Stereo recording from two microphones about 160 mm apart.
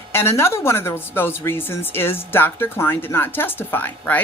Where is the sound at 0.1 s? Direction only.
15° left (ahead or behind).